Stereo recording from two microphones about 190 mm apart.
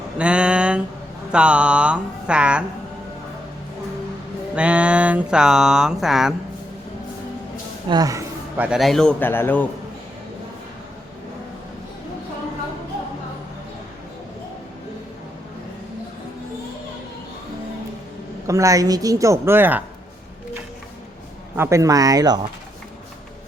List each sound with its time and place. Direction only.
0.2 s a sound: 5° right (ahead or behind)
1.3 s a man's voice: 5° right (ahead or behind)
4.5 s a man's voice: 5° right (ahead or behind)
7.9 s a man's voice: 20° right (ahead or behind); by 9.6 s 10° left (ahead or behind)
18.4 s a woman's voice: 15° right (ahead or behind)
21.5 s a woman's voice: 15° right (ahead or behind)